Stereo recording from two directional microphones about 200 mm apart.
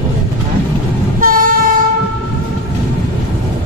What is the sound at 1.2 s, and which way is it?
Train, 45° right (ahead or behind).